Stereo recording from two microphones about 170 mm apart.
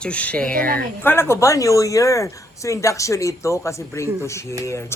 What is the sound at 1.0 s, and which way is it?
Speech, 15° left (ahead or behind).